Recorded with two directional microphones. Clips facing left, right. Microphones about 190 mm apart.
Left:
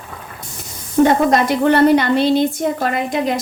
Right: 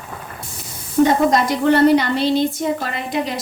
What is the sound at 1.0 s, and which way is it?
A woman's voice, 65° left (ahead or behind).